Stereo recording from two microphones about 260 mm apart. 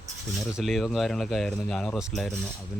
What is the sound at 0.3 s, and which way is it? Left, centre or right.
Speech, centre.